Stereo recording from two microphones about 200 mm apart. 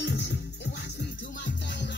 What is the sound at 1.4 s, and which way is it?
Music, 60° left (ahead or behind).